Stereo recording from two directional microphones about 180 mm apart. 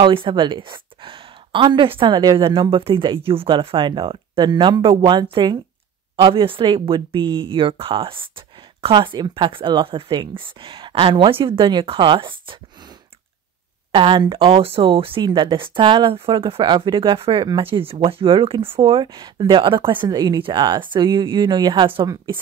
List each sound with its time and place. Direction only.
0.0 s speech: 30° right (ahead or behind)
13.9 s speech: 25° right (ahead or behind)